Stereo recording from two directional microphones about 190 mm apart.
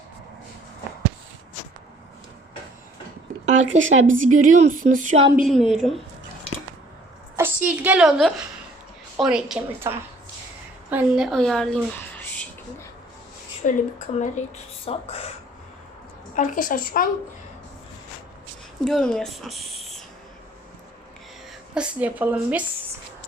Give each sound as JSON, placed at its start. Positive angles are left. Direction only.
{"t": 3.4, "sound": "speech", "side_deg": -35}
{"t": 3.8, "sound": "speech", "side_deg": -90}
{"t": 4.1, "sound": "a sound", "side_deg": -45}
{"t": 5.5, "sound": "a woman's voice", "side_deg": 0}
{"t": 7.3, "sound": "a woman's voice", "side_deg": -10}
{"t": 13.6, "sound": "a woman's voice", "side_deg": 45}
{"t": 16.3, "sound": "a woman's voice", "side_deg": 45}
{"t": 18.9, "sound": "speech", "side_deg": 5}
{"t": 21.8, "sound": "speech", "side_deg": -10}